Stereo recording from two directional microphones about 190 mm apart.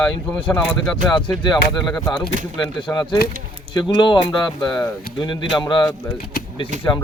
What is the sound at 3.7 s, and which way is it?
Speech, 25° left (ahead or behind).